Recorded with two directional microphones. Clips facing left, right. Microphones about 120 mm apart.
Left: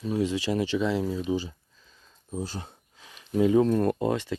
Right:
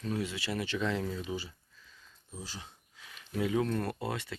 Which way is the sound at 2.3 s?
50° left (ahead or behind).